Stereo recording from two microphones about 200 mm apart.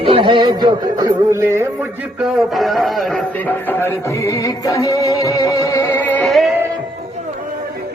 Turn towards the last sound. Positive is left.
turn(degrees=0)  # may be behind; listen again after turning